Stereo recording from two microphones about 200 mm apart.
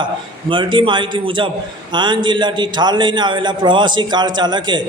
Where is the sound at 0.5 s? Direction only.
25° right (ahead or behind).